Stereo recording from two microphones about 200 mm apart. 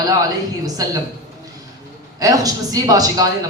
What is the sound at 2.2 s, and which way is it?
A man's voice, 20° right (ahead or behind).